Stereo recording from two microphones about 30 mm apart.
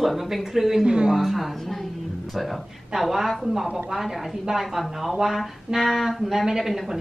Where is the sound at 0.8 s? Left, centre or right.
Right.